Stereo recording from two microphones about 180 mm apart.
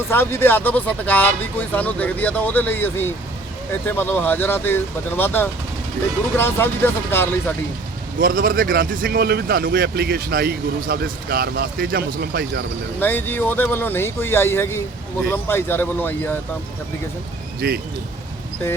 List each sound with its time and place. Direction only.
0.1 s speech: 10° left (ahead or behind)
8.2 s speech: 50° right (ahead or behind)
13.0 s speech: 10° left (ahead or behind)
17.6 s speech: 60° right (ahead or behind)